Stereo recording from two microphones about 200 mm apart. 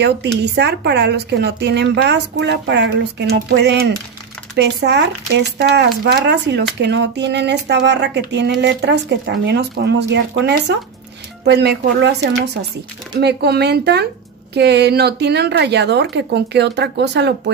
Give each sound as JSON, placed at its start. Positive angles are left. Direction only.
{"t": 0.0, "sound": "a woman's voice", "side_deg": -55}